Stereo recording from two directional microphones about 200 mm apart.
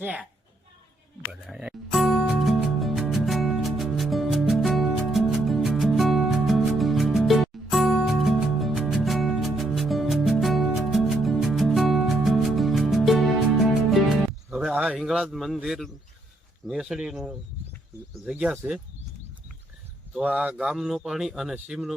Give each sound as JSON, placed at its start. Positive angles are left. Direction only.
{"t": 0.0, "sound": "a woman's voice", "side_deg": -5}
{"t": 1.3, "sound": "music", "side_deg": -5}
{"t": 16.6, "sound": "speech", "side_deg": 0}
{"t": 20.1, "sound": "speech", "side_deg": -5}